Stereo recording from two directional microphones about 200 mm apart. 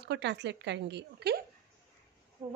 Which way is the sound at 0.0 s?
60° right (ahead or behind).